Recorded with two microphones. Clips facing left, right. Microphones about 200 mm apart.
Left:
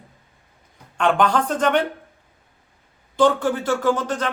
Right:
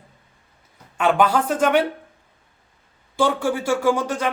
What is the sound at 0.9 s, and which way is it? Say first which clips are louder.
Speech: right 1 dB; 5° right (ahead or behind).